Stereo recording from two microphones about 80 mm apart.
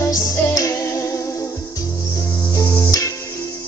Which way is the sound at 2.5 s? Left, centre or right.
Left.